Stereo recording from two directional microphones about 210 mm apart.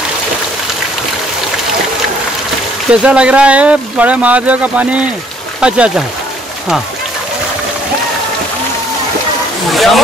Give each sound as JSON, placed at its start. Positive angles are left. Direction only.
{"t": 2.9, "sound": "speech", "side_deg": -5}
{"t": 9.7, "sound": "speech", "side_deg": 0}